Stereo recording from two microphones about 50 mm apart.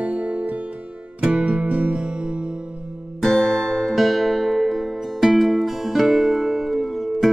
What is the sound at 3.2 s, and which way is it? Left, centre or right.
Music, centre.